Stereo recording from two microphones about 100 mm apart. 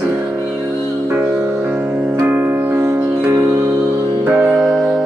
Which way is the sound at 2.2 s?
20° right (ahead or behind).